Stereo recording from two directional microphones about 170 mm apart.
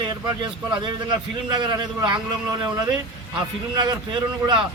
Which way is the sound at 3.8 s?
25° right (ahead or behind).